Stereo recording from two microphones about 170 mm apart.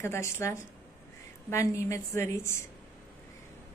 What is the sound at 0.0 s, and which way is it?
A woman's voice, 15° left (ahead or behind).